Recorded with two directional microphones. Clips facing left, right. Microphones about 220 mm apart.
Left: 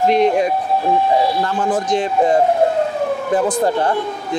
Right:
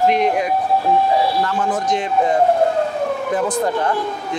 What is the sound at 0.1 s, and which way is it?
Speech, 30° left (ahead or behind).